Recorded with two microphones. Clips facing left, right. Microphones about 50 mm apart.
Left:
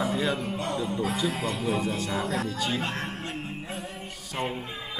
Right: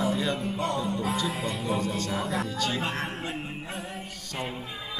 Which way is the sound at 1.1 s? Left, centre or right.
Centre.